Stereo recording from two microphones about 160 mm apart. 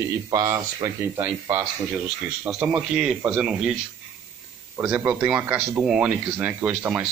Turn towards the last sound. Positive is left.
turn(degrees=-10)  # may be behind; listen again after turning